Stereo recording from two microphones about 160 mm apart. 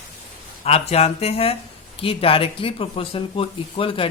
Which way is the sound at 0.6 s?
40° left (ahead or behind).